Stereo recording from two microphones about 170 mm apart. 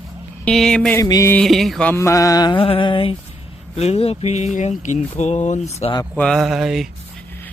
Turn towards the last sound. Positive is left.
turn(degrees=0)  # may be behind; listen again after turning